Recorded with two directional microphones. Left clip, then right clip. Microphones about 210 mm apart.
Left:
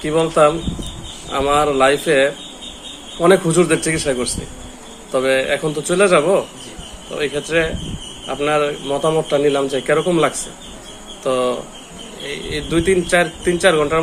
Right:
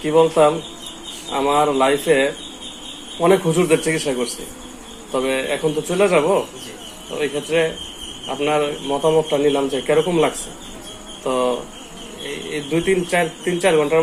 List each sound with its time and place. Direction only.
0.0 s a man's voice: 25° left (ahead or behind)